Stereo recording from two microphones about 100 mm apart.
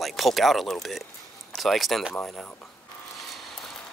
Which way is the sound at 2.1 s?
20° left (ahead or behind).